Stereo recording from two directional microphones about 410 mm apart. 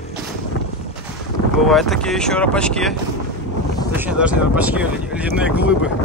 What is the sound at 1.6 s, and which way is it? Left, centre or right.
Speech, centre.